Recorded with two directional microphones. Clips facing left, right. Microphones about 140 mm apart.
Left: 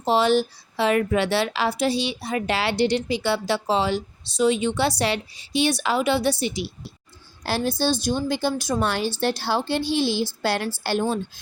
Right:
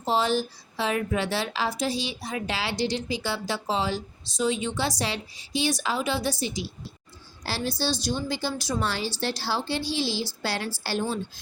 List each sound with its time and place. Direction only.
0.0 s a woman's voice: 70° left (ahead or behind)
7.4 s a woman's voice: 50° left (ahead or behind)